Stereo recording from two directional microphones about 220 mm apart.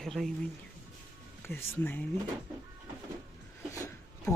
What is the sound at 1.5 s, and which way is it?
Speech, 10° left (ahead or behind).